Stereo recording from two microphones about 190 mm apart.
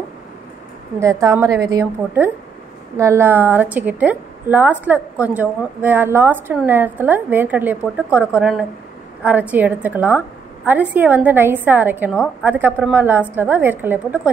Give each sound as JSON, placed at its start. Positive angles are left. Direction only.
{"t": 0.9, "sound": "a woman's voice", "side_deg": -15}